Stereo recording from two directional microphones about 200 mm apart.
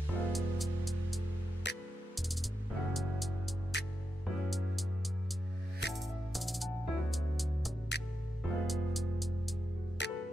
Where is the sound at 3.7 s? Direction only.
60° left (ahead or behind).